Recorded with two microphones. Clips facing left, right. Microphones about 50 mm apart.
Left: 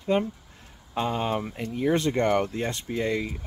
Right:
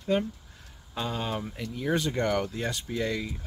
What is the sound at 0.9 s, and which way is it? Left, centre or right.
Speech, left.